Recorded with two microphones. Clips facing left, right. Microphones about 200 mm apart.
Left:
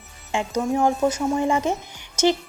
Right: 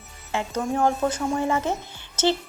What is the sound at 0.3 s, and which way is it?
Speech, 15° left (ahead or behind).